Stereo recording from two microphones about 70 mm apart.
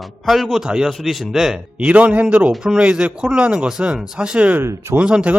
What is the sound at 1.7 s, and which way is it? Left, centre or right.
Speech, centre.